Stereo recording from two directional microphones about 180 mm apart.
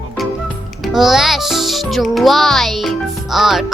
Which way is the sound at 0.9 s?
Centre (ahead or behind).